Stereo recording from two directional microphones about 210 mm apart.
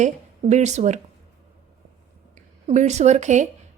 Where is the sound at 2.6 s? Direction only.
35° right (ahead or behind).